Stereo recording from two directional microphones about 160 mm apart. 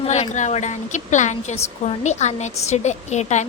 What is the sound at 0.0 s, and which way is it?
A woman's voice, 45° left (ahead or behind).